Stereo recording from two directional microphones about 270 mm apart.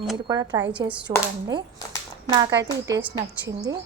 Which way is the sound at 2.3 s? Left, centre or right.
Centre.